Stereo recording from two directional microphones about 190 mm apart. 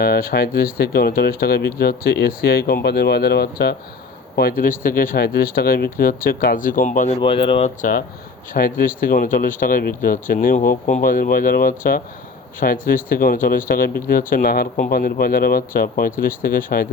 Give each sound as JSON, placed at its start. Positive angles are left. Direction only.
{"t": 0.0, "sound": "speech", "side_deg": 50}
{"t": 7.2, "sound": "speech", "side_deg": 30}
{"t": 7.8, "sound": "speech", "side_deg": 45}